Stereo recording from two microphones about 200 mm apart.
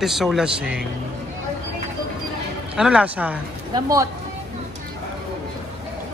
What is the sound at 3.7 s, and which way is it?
Speech, 15° right (ahead or behind).